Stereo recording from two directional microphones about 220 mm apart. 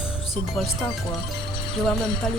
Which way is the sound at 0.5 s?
Centre (ahead or behind).